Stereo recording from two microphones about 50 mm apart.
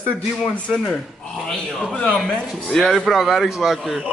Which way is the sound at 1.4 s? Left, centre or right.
Centre.